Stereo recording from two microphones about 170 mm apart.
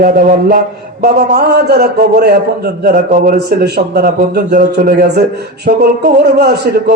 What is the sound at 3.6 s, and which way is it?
Mantra, 65° right (ahead or behind).